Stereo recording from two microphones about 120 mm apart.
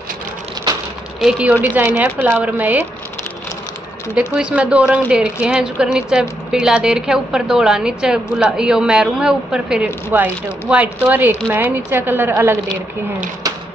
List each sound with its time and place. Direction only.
1.8 s a woman's voice: 20° right (ahead or behind)
4.1 s a woman's voice: 10° right (ahead or behind)